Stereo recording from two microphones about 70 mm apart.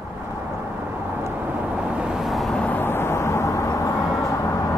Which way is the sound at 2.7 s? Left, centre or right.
Left.